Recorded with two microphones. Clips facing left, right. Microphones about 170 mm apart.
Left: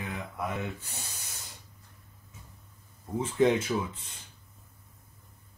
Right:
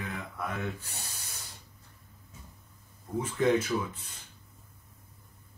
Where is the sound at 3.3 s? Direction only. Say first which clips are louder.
Left 2 dB; 25° left (ahead or behind).